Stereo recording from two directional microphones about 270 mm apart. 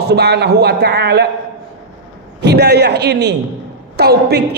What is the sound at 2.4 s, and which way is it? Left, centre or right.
A man's voice, right.